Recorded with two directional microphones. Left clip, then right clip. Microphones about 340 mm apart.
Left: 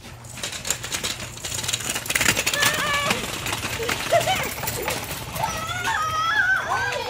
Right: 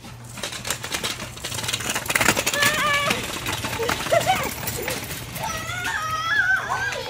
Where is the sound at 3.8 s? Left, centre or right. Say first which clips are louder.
Right 1 dB; centre.